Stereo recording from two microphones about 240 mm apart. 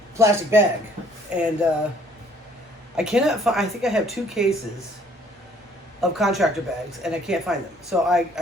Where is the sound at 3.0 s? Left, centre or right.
Centre.